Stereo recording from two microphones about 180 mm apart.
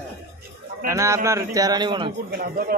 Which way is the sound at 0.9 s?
15° right (ahead or behind).